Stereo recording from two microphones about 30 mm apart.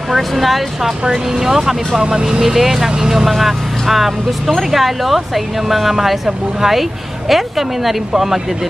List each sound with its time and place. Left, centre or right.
0.1 s speech: centre
1.0 s speech: centre
2.0 s speech: right
2.4 s speech: centre
3.3 s speech: centre